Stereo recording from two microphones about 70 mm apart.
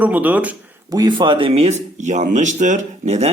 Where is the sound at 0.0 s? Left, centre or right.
Right.